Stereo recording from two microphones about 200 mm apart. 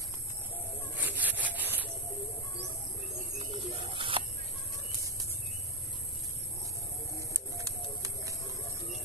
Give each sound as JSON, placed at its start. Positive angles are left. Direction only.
{"t": 0.9, "sound": "rub", "side_deg": -10}
{"t": 3.3, "sound": "bird", "side_deg": -30}
{"t": 7.2, "sound": "bird", "side_deg": -15}